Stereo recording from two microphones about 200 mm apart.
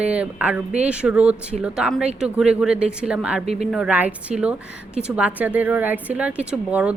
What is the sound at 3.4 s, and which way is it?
Speech, 35° right (ahead or behind).